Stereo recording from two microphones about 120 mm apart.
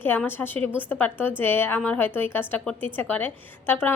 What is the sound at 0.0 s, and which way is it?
A woman's voice, 15° left (ahead or behind).